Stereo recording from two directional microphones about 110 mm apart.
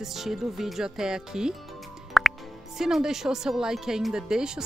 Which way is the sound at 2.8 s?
5° right (ahead or behind).